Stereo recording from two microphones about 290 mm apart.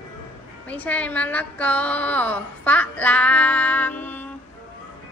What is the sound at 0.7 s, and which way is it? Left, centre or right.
Speech, centre.